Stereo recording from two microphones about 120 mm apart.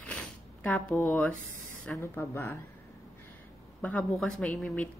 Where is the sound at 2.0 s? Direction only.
20° left (ahead or behind).